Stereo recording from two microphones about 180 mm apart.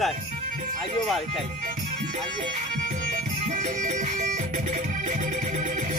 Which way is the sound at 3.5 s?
45° right (ahead or behind).